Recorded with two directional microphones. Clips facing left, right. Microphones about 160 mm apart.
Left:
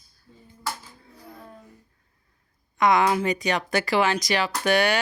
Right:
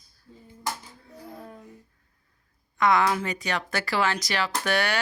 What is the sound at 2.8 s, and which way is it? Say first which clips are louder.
Speech: left 2 dB; 15° left (ahead or behind).